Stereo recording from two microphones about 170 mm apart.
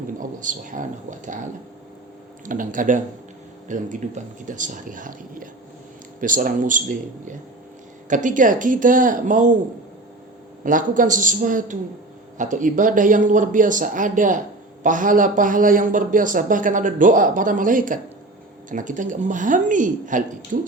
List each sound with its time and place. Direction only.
0.2 s speech: 50° right (ahead or behind)
2.5 s speech: 50° right (ahead or behind)
10.6 s speech: 50° right (ahead or behind)